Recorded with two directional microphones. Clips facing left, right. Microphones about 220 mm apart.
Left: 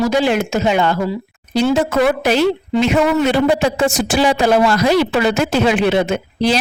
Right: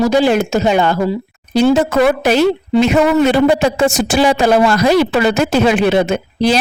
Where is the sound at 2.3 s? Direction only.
45° right (ahead or behind).